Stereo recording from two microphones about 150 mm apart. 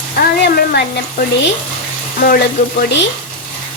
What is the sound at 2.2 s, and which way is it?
Speech, 75° left (ahead or behind).